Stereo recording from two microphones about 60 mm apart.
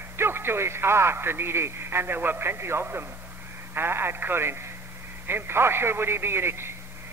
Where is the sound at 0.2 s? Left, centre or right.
Right.